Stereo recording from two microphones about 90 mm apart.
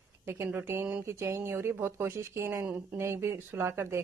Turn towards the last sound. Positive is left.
turn(degrees=-30)  # may be behind; listen again after turning